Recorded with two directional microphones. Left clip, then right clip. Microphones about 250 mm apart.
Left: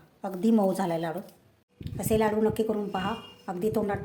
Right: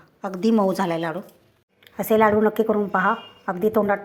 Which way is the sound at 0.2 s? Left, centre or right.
Centre.